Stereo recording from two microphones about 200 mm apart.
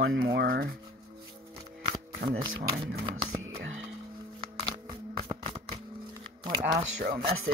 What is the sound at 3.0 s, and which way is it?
Music, 20° right (ahead or behind).